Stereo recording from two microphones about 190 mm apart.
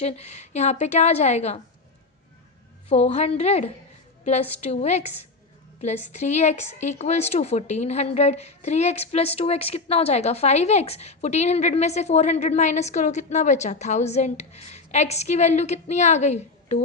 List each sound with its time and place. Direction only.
0.0 s a woman's voice: 35° left (ahead or behind)
2.9 s a woman's voice: 35° left (ahead or behind)